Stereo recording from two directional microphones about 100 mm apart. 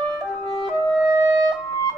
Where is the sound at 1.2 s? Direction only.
40° right (ahead or behind).